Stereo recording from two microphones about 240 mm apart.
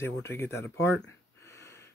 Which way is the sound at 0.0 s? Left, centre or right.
Centre.